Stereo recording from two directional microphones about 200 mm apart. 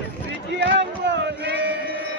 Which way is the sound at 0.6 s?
60° right (ahead or behind).